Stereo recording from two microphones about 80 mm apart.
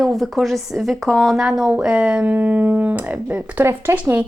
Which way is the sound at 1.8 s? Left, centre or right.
Centre.